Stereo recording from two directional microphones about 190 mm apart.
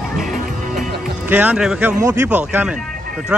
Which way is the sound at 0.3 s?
45° right (ahead or behind).